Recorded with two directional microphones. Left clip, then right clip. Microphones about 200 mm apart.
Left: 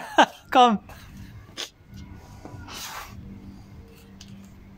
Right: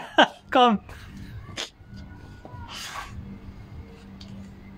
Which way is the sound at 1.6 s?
5° right (ahead or behind).